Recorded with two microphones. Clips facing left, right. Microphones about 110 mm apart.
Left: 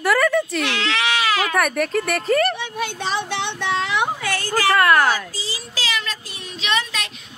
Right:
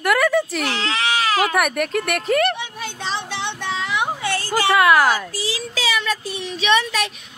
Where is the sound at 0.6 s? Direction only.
35° right (ahead or behind).